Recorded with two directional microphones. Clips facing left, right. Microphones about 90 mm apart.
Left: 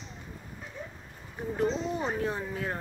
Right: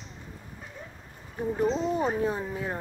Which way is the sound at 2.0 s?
10° right (ahead or behind).